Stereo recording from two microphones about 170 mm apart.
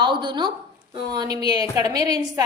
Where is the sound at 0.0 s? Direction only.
25° right (ahead or behind).